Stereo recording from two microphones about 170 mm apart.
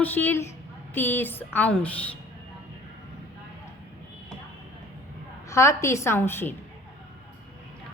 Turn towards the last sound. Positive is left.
turn(degrees=15)  # may be behind; listen again after turning